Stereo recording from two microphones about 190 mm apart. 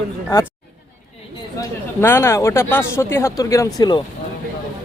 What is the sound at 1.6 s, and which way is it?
Speech, 10° left (ahead or behind).